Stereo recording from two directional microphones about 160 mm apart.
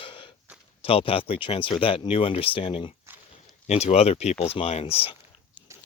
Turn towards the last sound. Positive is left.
turn(degrees=35)  # may be behind; listen again after turning